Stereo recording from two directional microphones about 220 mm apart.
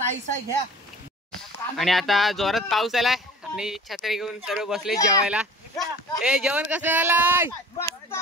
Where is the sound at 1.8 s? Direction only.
Centre (ahead or behind).